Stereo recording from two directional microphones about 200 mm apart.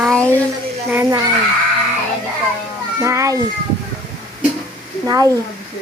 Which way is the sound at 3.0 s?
15° right (ahead or behind).